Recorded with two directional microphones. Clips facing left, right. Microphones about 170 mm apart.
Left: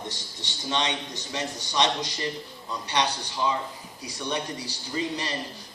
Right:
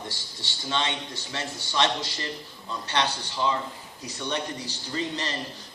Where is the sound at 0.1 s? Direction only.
15° left (ahead or behind).